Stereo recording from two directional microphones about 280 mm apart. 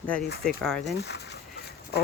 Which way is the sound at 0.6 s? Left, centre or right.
Centre.